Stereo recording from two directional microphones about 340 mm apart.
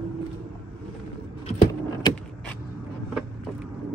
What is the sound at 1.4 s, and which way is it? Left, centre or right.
Vehicle, centre.